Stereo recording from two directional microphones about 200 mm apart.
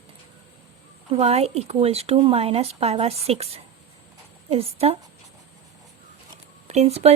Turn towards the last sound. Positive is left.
turn(degrees=-30)  # may be behind; listen again after turning